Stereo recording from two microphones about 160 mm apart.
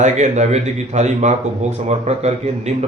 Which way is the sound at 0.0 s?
45° right (ahead or behind).